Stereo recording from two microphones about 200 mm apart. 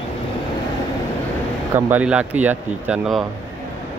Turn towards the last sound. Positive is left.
turn(degrees=0)  # may be behind; listen again after turning